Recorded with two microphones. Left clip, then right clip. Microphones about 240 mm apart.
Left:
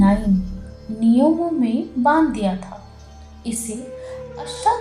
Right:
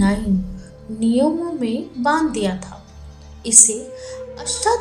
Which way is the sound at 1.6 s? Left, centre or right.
Right.